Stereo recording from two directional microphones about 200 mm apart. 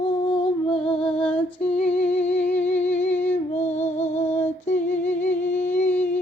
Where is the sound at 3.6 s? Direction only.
35° left (ahead or behind).